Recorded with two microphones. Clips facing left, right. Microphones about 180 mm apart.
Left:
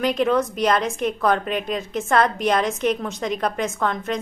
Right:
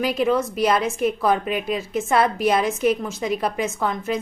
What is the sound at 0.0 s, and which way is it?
A woman's voice, 5° right (ahead or behind).